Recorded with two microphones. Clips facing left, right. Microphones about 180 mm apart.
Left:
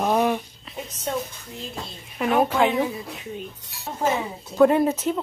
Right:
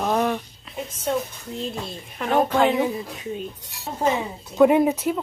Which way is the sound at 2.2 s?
10° left (ahead or behind).